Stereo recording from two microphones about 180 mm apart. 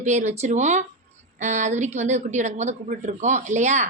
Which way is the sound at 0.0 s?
40° right (ahead or behind).